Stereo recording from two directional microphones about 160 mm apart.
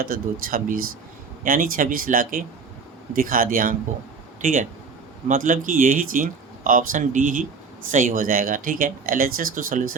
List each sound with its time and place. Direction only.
0.0 s speech: 65° right (ahead or behind)